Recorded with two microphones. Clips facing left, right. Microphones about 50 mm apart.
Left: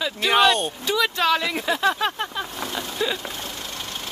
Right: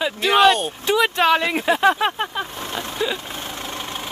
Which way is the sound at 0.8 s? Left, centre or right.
Right.